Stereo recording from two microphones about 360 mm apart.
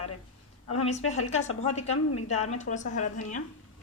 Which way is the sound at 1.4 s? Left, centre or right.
Left.